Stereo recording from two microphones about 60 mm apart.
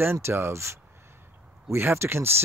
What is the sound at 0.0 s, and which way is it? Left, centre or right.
Speech, right.